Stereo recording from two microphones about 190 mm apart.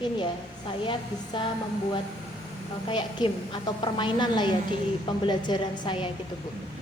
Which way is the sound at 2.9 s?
25° left (ahead or behind).